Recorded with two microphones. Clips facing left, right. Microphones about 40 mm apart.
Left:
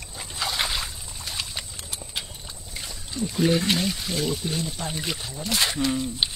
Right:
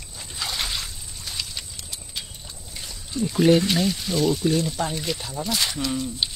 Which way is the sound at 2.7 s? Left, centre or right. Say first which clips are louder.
Right 3 dB; centre.